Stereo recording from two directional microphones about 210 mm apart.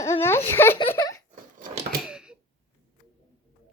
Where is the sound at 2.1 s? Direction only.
5° right (ahead or behind).